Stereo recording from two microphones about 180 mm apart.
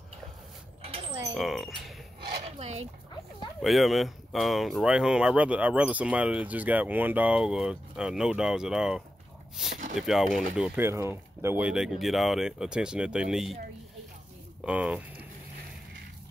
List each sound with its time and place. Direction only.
0.8 s a sound: 30° right (ahead or behind)
1.3 s speech: centre (ahead or behind)
2.6 s speech: 35° right (ahead or behind)
3.6 s speech: centre (ahead or behind)
10.9 s speech: 15° right (ahead or behind)
14.6 s speech: 5° right (ahead or behind)